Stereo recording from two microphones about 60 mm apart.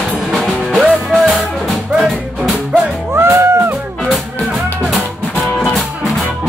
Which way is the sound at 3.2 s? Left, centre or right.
Right.